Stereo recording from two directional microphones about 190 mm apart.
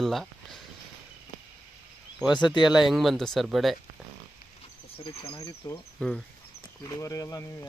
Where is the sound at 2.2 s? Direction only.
Centre (ahead or behind).